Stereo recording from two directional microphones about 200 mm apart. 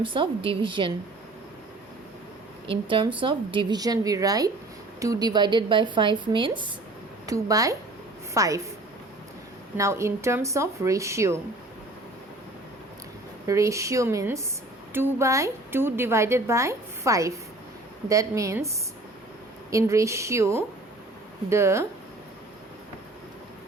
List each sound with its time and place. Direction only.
0.0 s a woman's voice: 25° right (ahead or behind)
2.6 s a woman's voice: 25° right (ahead or behind)
9.7 s a woman's voice: 15° right (ahead or behind)
13.5 s a woman's voice: 15° right (ahead or behind)
19.7 s a woman's voice: 15° right (ahead or behind)